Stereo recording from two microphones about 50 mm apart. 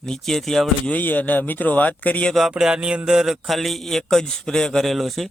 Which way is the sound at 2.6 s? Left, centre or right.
Centre.